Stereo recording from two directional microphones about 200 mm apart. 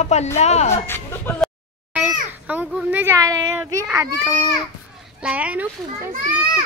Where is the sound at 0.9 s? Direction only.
10° left (ahead or behind).